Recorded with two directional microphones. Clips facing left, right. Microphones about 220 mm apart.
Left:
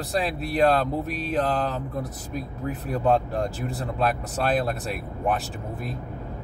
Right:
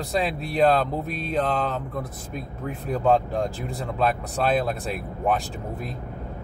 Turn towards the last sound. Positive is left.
turn(degrees=0)  # may be behind; listen again after turning